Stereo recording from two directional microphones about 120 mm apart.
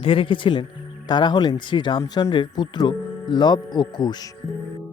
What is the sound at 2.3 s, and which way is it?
Speech, 40° left (ahead or behind).